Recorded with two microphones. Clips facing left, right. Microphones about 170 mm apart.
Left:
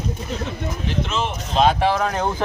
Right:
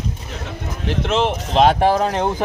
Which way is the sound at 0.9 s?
70° right (ahead or behind).